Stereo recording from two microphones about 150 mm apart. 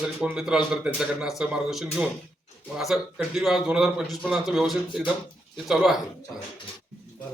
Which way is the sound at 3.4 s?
Centre (ahead or behind).